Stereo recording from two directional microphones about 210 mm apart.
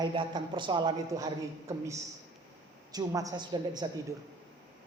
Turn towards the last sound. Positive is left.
turn(degrees=-20)  # may be behind; listen again after turning